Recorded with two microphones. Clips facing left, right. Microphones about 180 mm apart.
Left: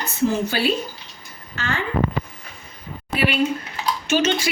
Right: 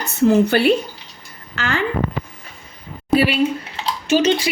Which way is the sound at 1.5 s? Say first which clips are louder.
Right 4 dB; 85° right.